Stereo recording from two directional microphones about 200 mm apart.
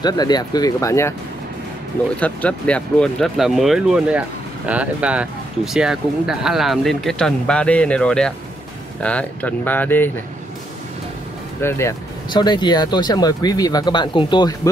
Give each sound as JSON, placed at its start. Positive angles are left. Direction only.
{"t": 0.0, "sound": "speech", "side_deg": 20}
{"t": 2.1, "sound": "speech", "side_deg": 5}
{"t": 11.6, "sound": "speech", "side_deg": 15}